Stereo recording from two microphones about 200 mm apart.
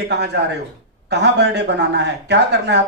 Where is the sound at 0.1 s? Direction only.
60° right (ahead or behind).